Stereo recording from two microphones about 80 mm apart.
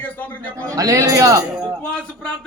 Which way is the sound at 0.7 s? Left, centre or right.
Right.